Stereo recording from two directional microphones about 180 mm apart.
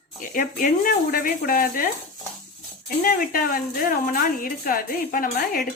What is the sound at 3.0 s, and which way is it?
A woman's voice, 55° left (ahead or behind).